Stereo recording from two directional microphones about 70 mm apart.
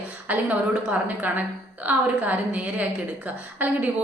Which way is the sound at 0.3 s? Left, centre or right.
Right.